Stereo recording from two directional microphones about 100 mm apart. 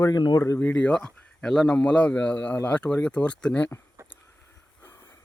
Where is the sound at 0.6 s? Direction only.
10° left (ahead or behind).